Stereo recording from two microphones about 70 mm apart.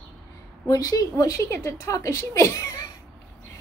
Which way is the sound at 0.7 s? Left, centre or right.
Left.